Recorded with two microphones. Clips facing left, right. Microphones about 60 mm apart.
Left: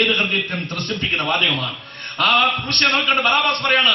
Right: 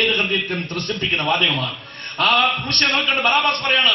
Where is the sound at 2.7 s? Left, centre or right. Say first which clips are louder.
Left 4 dB; left.